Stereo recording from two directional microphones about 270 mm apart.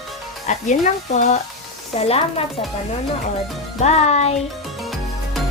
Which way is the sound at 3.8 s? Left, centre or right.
Left.